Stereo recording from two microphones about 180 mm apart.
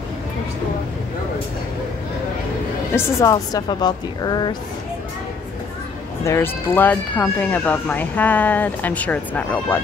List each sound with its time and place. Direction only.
3.2 s a woman's voice: 20° left (ahead or behind)
6.2 s speech: 15° left (ahead or behind)